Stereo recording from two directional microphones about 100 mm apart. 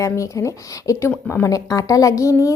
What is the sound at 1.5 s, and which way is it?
A woman's voice, 35° left (ahead or behind).